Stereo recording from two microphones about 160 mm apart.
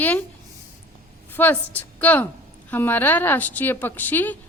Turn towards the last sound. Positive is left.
turn(degrees=10)  # may be behind; listen again after turning